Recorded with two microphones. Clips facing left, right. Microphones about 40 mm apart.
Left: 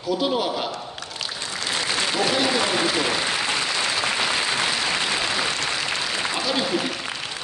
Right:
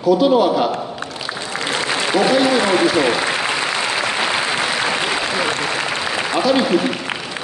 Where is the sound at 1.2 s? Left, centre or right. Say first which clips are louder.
Right 5 dB; right.